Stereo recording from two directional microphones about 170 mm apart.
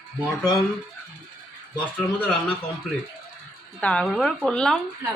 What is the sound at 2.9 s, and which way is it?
Speech, centre (ahead or behind).